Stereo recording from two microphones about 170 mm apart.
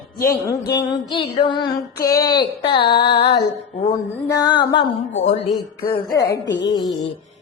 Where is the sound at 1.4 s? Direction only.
25° left (ahead or behind).